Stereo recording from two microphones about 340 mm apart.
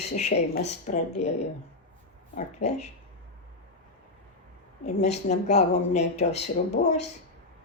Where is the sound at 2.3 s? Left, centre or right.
Centre.